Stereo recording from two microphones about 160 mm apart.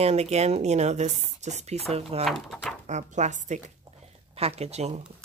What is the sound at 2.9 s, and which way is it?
Speech, 45° right (ahead or behind).